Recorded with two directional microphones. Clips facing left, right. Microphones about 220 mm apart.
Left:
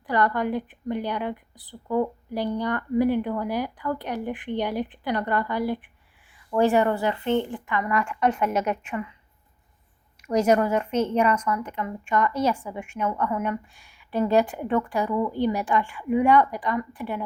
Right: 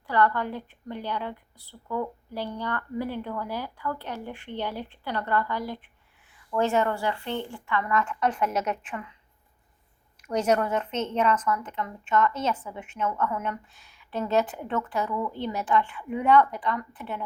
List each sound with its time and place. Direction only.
0.1 s a woman's voice: 15° left (ahead or behind)
10.2 s a woman's voice: 10° left (ahead or behind)